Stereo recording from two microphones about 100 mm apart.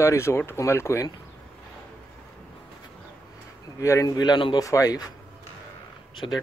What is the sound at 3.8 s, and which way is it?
Speech, 35° left (ahead or behind).